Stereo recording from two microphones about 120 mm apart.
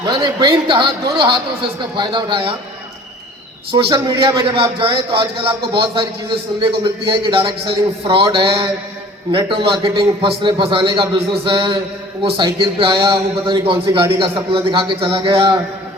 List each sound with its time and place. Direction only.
0.0 s a man's voice: 35° right (ahead or behind)
3.7 s a man's voice: 45° right (ahead or behind)